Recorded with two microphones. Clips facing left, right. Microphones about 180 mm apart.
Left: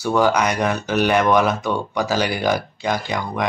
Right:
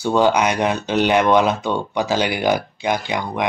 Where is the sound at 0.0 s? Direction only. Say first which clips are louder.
Right 1 dB; 20° right (ahead or behind).